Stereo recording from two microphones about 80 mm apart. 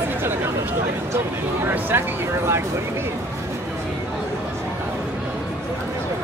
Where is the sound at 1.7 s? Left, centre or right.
Right.